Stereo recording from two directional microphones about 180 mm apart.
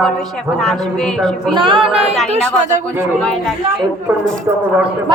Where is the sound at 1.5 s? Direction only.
25° right (ahead or behind).